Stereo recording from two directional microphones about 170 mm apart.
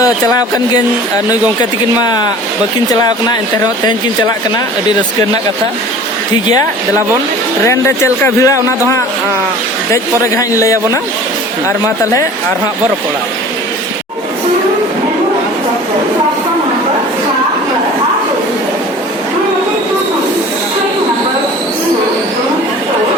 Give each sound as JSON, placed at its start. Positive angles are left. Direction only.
{"t": 7.6, "sound": "speech", "side_deg": 15}
{"t": 9.9, "sound": "speech", "side_deg": 20}